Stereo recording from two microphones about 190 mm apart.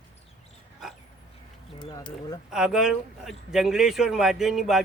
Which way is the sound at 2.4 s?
5° right (ahead or behind).